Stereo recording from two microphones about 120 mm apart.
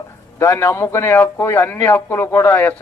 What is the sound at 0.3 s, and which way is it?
A man's voice, 25° left (ahead or behind).